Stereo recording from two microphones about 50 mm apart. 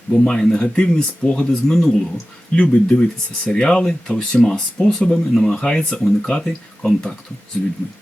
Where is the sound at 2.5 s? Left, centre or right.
Left.